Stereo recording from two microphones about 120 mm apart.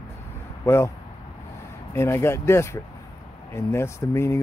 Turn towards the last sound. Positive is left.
turn(degrees=20)  # may be behind; listen again after turning